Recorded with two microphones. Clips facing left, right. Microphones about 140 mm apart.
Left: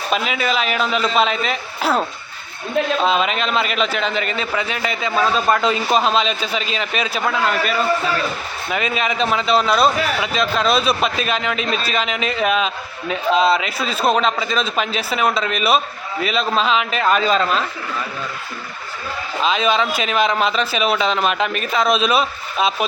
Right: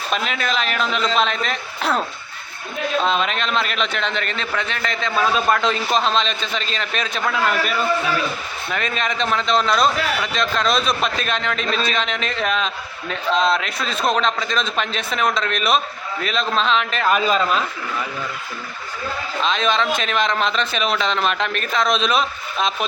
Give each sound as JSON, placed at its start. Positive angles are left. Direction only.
{"t": 0.1, "sound": "a man's voice", "side_deg": 5}
{"t": 3.0, "sound": "a man's voice", "side_deg": 5}
{"t": 19.4, "sound": "a man's voice", "side_deg": 5}